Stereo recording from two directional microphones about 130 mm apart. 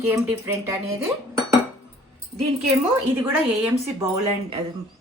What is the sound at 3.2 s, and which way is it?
Speech, 20° right (ahead or behind).